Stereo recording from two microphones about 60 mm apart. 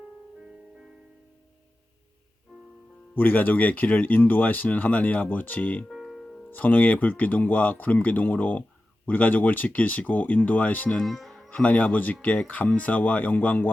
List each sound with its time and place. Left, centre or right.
3.2 s speech: left
5.9 s music: centre
6.5 s speech: left
11.0 s music: centre
11.5 s speech: left